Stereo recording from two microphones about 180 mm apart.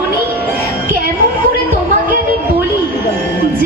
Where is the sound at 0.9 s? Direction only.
50° right (ahead or behind).